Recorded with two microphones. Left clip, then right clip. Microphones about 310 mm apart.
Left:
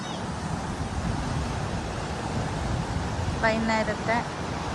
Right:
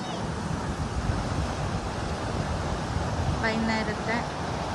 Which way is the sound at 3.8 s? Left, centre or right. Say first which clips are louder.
Left 3 dB; right.